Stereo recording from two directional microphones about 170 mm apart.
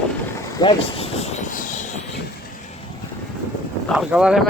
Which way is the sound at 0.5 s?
30° left (ahead or behind).